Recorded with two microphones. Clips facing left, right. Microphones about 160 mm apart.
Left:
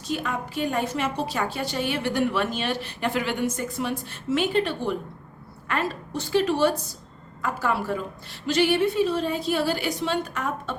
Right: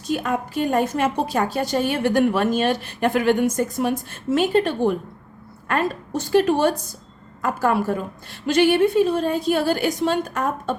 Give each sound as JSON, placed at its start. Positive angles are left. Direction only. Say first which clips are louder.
{"t": 0.1, "sound": "a woman's voice", "louder": "right 5 dB", "side_deg": -45}